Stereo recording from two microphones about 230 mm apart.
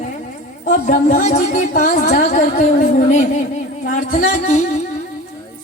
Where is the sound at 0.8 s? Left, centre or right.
Left.